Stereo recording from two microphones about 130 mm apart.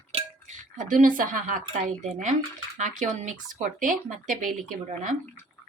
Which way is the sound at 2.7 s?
70° right (ahead or behind).